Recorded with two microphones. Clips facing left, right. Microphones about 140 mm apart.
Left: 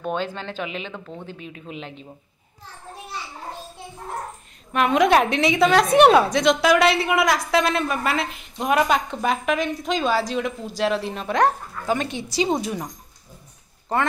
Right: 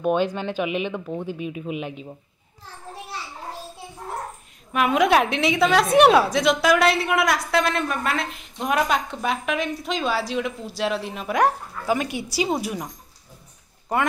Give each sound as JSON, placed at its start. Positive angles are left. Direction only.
{"t": 0.0, "sound": "speech", "side_deg": -15}
{"t": 4.7, "sound": "a woman's voice", "side_deg": -5}